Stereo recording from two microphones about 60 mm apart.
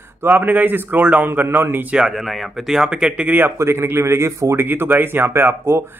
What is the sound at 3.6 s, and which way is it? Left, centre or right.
A man's voice, right.